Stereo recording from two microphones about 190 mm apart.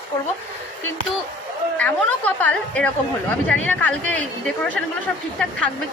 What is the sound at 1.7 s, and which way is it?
Chatter, 10° left (ahead or behind).